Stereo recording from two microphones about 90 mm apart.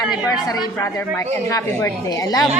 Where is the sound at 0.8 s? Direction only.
30° left (ahead or behind).